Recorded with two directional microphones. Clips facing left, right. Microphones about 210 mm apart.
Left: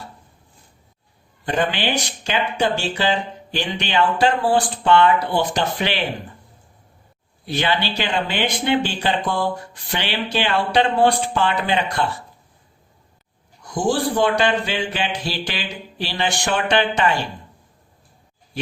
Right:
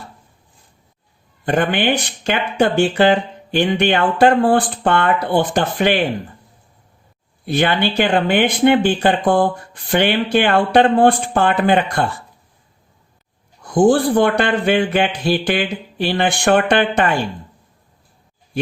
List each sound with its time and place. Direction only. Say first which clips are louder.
1.5 s speech: right 5 dB; 55° right (ahead or behind)
7.4 s speech: right 5 dB; 55° right (ahead or behind)
13.7 s speech: right 8 dB; 55° right (ahead or behind)